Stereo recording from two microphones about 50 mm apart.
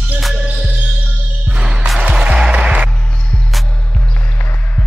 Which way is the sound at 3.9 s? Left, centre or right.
Left.